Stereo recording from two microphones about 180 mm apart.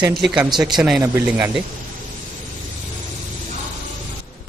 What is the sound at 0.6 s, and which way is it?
Speech, centre (ahead or behind).